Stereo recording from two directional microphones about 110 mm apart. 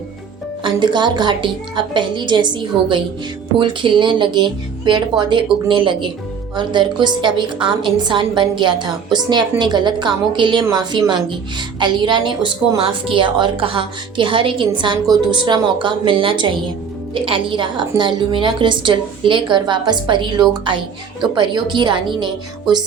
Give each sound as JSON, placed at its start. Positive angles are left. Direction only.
{"t": 0.6, "sound": "a woman's voice", "side_deg": -45}
{"t": 11.8, "sound": "a woman's voice", "side_deg": -45}